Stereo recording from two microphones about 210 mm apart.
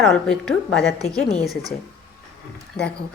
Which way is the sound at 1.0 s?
30° left (ahead or behind).